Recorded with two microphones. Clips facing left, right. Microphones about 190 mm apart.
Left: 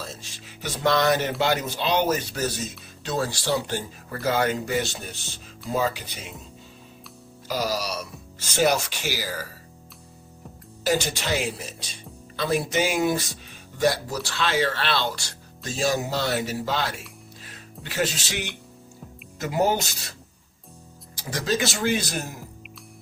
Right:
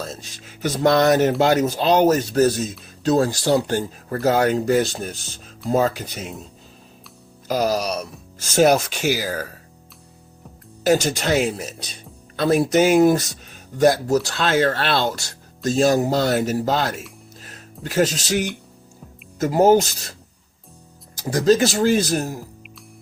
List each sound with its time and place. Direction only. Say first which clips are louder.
0.0 s speech: right 6 dB; 50° right (ahead or behind)
7.4 s speech: right 6 dB; 50° right (ahead or behind)
10.8 s speech: right 6 dB; 45° right (ahead or behind)
15.7 s speech: right 7 dB; 55° right (ahead or behind)
16.0 s speech: right 7 dB; 45° right (ahead or behind)
17.4 s music: right 8 dB; 45° right (ahead or behind)
19.4 s speech: right 9 dB; 45° right (ahead or behind)
21.3 s speech: right 10 dB; 40° right (ahead or behind)